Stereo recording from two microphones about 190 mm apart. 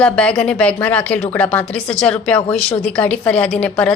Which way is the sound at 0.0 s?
5° left (ahead or behind).